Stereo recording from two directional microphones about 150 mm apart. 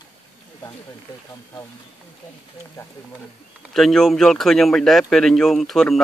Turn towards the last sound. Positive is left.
turn(degrees=0)  # may be behind; listen again after turning